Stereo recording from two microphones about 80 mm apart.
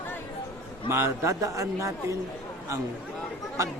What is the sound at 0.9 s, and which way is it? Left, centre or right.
A man's voice, right.